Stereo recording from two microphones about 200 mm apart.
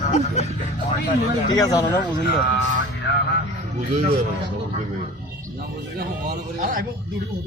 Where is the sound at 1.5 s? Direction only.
15° left (ahead or behind).